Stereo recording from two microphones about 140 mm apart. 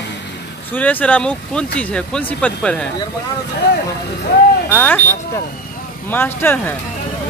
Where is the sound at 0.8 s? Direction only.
10° left (ahead or behind).